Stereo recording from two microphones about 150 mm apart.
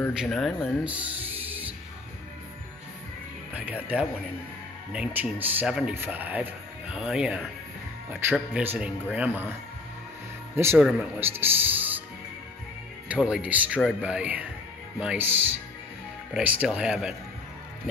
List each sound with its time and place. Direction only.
0.1 s speech: 5° right (ahead or behind)
0.8 s music: 10° right (ahead or behind)
3.5 s speech: 10° right (ahead or behind)
10.8 s speech: 5° right (ahead or behind)
11.1 s speech: 15° right (ahead or behind)
13.1 s speech: 5° right (ahead or behind)